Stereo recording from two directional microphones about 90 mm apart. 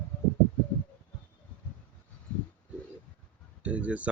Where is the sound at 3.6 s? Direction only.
15° right (ahead or behind).